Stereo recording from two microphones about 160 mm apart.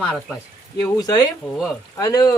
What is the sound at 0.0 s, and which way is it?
Speech, 10° left (ahead or behind).